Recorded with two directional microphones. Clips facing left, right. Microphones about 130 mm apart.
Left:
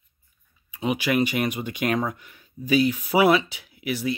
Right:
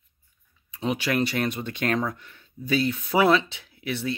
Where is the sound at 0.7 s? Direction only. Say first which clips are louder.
Left 2 dB; 10° left (ahead or behind).